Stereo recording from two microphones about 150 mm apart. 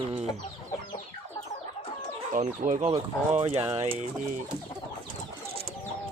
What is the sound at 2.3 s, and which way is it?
Speech, 55° right (ahead or behind).